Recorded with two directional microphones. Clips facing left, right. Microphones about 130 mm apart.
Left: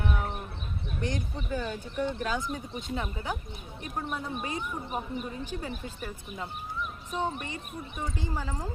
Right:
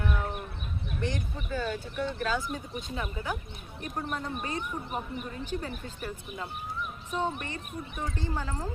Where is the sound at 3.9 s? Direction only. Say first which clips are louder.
Even; 5° left (ahead or behind).